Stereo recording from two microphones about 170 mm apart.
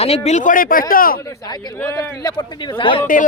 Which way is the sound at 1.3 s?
25° left (ahead or behind).